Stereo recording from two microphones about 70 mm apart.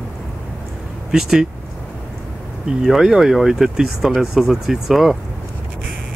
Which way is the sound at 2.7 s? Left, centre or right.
Centre.